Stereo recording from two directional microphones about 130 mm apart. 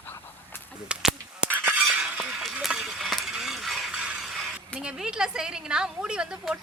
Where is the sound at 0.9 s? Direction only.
10° right (ahead or behind).